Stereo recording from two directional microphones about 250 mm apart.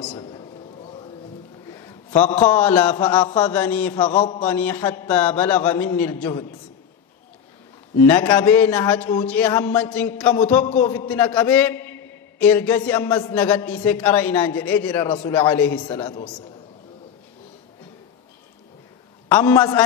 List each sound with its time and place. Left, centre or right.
0.0 s a sound: centre
1.7 s a man's voice: centre
8.0 s a man's voice: centre
19.2 s a man's voice: centre